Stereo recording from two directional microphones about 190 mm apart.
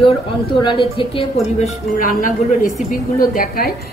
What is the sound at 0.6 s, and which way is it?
A woman's voice, 25° left (ahead or behind).